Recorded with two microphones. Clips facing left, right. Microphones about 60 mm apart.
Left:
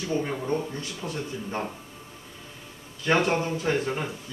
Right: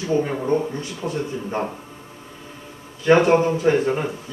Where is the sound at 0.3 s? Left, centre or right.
Right.